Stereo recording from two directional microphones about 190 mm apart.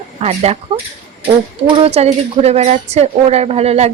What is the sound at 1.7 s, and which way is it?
A woman's voice, 30° right (ahead or behind).